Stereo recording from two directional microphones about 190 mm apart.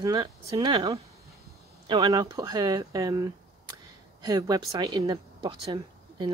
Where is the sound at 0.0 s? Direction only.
20° right (ahead or behind).